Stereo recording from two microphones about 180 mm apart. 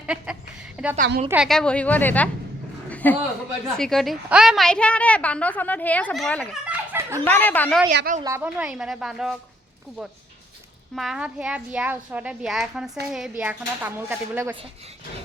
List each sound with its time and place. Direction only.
0.0 s a woman's voice: 5° right (ahead or behind); by 2.3 s 10° left (ahead or behind)
2.9 s a sound: 10° left (ahead or behind)
3.7 s a woman's voice: 5° left (ahead or behind)
6.7 s a sound: 15° right (ahead or behind)
7.3 s a woman's voice: 10° left (ahead or behind)
7.9 s a woman's voice: 50° right (ahead or behind)
8.2 s a child's voice: 15° right (ahead or behind)
10.9 s a child's voice: centre (ahead or behind)